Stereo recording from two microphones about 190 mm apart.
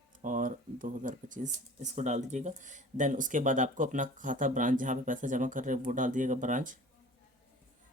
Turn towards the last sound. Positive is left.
turn(degrees=-45)  # may be behind; listen again after turning